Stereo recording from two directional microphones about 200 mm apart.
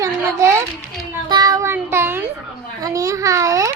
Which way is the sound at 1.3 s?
20° right (ahead or behind).